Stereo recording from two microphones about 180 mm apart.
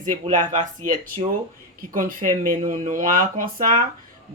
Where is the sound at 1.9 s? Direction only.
50° right (ahead or behind).